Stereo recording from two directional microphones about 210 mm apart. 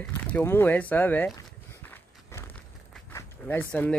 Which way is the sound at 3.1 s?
10° left (ahead or behind).